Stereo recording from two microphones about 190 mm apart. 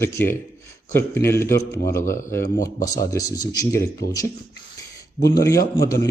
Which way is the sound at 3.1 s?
20° left (ahead or behind).